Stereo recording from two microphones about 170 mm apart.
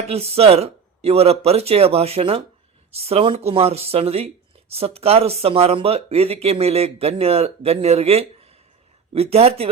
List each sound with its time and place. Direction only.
0.1 s speech: 35° right (ahead or behind)